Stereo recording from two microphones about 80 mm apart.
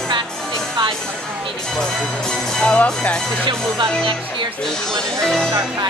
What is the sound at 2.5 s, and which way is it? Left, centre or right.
Music, centre.